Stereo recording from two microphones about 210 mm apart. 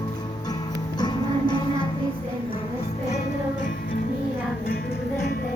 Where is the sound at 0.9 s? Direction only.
20° left (ahead or behind).